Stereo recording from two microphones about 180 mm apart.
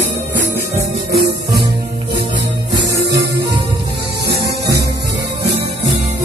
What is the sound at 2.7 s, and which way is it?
Music, 20° right (ahead or behind).